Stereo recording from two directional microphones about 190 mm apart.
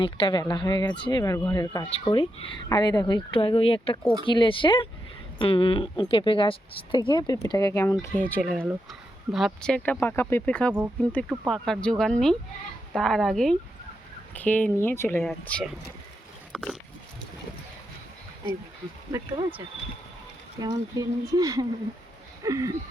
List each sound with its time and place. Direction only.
0.0 s speech: 25° left (ahead or behind); by 8.4 s 10° left (ahead or behind)
8.4 s speech: centre (ahead or behind)
16.5 s pig: centre (ahead or behind)
19.1 s speech: 25° right (ahead or behind)
22.4 s a sound: 15° right (ahead or behind)